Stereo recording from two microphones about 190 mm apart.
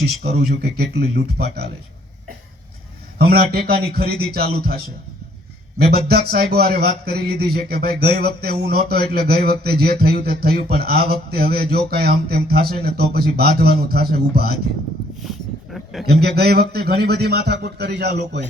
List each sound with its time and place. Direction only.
0.0 s a man's voice: 60° right (ahead or behind)
3.2 s a man's voice: 55° right (ahead or behind)
6.1 s a man's voice: 55° right (ahead or behind)
15.2 s a sound: centre (ahead or behind)
16.2 s a man's voice: 55° right (ahead or behind)